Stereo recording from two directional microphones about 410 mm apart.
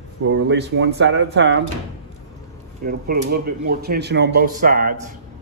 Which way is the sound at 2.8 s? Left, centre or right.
Right.